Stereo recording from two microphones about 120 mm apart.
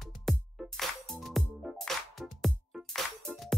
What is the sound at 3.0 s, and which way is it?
Music, 5° left (ahead or behind).